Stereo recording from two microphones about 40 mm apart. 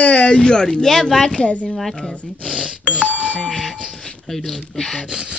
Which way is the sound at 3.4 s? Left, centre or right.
Centre.